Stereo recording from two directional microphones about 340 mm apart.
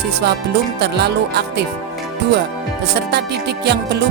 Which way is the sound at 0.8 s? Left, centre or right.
Right.